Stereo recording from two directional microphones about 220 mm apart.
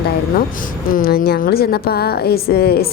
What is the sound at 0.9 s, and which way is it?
A woman's voice, 40° left (ahead or behind).